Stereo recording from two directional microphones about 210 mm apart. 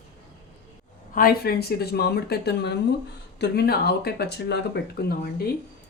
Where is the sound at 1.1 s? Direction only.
45° left (ahead or behind).